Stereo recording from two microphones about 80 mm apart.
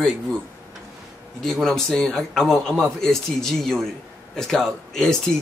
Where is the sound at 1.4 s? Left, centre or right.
Centre.